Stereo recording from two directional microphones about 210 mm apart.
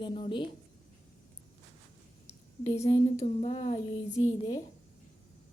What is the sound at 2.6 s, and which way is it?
A woman's voice, 30° left (ahead or behind).